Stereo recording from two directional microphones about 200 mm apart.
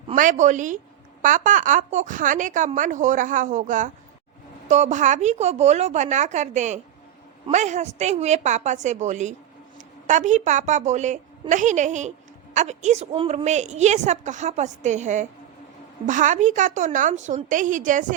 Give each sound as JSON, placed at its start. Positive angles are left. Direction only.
{"t": 0.1, "sound": "a woman's voice", "side_deg": -40}